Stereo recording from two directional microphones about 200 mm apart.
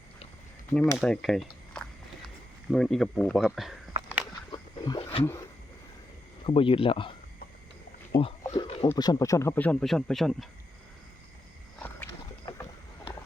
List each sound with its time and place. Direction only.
0.7 s speech: 5° left (ahead or behind)
4.5 s a sound: 20° left (ahead or behind)
6.4 s speech: 25° left (ahead or behind)
8.1 s speech: 25° left (ahead or behind)
8.4 s a sound: 25° left (ahead or behind)
8.9 s speech: 20° left (ahead or behind); by 10.5 s centre (ahead or behind)
11.8 s rowboat: 10° left (ahead or behind)